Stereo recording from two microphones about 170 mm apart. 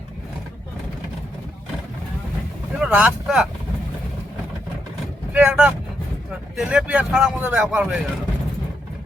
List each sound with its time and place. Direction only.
2.7 s speech: 5° right (ahead or behind)
5.3 s speech: 5° right (ahead or behind)